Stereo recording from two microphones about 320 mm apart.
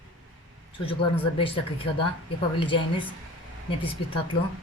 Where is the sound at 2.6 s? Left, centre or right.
Centre.